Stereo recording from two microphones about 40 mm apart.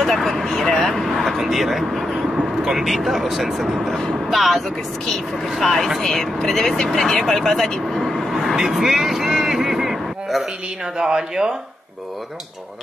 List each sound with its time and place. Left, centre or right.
0.0 s speech: centre
7.9 s vehicle: centre
8.3 s vehicle: centre
11.0 s speech: centre